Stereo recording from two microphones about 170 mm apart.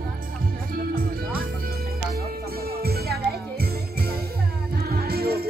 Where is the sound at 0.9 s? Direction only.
60° right (ahead or behind).